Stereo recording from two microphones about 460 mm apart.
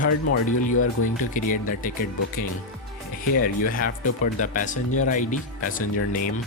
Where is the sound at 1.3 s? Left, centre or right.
Centre.